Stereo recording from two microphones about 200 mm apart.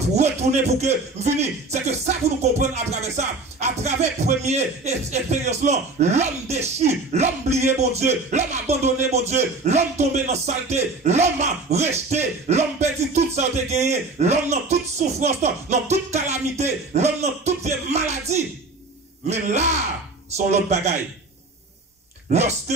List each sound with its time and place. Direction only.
0.0 s speech: 35° right (ahead or behind)
22.3 s speech: 35° right (ahead or behind)